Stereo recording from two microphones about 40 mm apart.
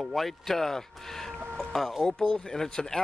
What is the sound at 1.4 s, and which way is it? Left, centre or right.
Chicken, centre.